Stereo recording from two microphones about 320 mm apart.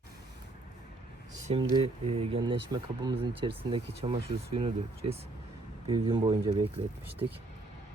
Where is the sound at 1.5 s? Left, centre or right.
Centre.